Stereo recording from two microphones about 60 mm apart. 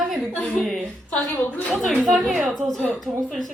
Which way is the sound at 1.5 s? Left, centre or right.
Left.